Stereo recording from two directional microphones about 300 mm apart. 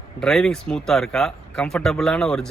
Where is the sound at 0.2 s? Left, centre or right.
Centre.